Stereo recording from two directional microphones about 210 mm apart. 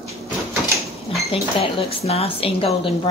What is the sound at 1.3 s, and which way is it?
Speech, 25° left (ahead or behind).